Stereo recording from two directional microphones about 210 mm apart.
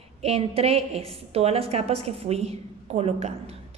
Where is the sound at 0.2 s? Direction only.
30° right (ahead or behind).